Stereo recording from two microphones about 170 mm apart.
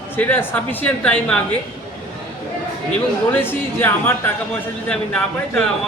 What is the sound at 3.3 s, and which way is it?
A woman's voice, 10° left (ahead or behind).